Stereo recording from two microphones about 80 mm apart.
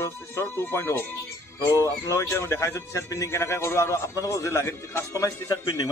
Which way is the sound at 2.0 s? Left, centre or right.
Left.